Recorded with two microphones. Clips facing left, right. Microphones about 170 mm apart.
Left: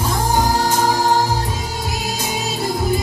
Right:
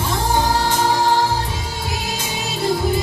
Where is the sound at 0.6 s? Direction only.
45° left (ahead or behind).